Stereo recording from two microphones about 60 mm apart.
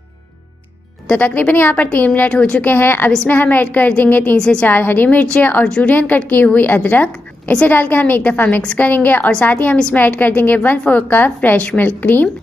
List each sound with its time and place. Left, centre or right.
1.0 s a woman's voice: left
2.3 s a woman's voice: centre
2.6 s a woman's voice: left
4.4 s a woman's voice: centre
4.6 s a woman's voice: left